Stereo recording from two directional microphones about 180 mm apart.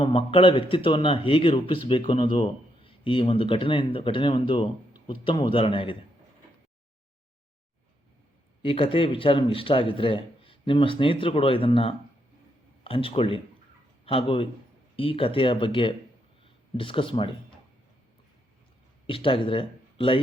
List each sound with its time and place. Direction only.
0.0 s a man's voice: 30° left (ahead or behind)
8.6 s a man's voice: 30° left (ahead or behind)
19.0 s speech: 30° left (ahead or behind)